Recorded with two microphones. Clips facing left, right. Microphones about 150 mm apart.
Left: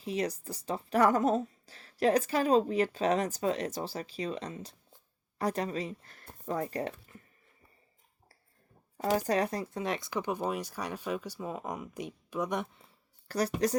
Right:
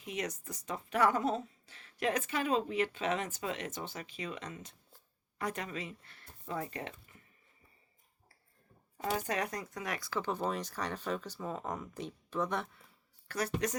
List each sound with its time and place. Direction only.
0.0 s speech: 30° left (ahead or behind)
9.0 s speech: 35° left (ahead or behind); by 12.8 s 15° left (ahead or behind)
12.8 s a sound: 35° left (ahead or behind)